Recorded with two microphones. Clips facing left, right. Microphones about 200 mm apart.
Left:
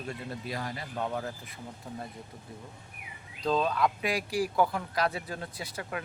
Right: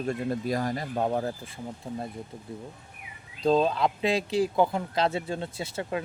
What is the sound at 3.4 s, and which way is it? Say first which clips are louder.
Speech: right 4 dB; 25° right (ahead or behind).